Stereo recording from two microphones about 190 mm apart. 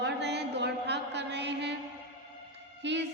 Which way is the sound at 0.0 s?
65° right (ahead or behind).